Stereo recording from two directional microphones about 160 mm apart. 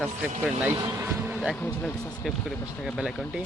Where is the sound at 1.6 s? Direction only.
15° left (ahead or behind).